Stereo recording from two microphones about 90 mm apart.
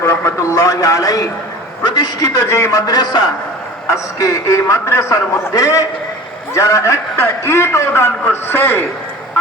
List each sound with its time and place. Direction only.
0.0 s a sound: 30° left (ahead or behind)
1.8 s a man's voice: 50° left (ahead or behind); by 2.8 s 35° left (ahead or behind)
2.8 s a man's voice: 50° left (ahead or behind)
3.8 s a man's voice: 35° left (ahead or behind)